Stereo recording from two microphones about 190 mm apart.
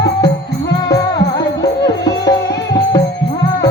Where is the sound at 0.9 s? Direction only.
20° left (ahead or behind).